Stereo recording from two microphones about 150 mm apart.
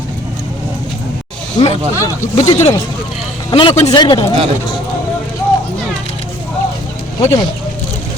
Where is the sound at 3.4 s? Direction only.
35° left (ahead or behind).